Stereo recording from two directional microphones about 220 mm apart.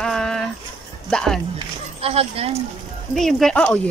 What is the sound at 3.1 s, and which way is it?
Speech, centre (ahead or behind).